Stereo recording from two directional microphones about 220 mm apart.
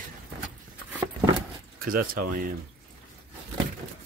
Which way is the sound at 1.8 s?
40° right (ahead or behind).